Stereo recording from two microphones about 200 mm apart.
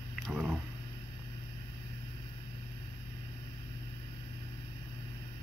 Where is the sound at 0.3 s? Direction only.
5° right (ahead or behind).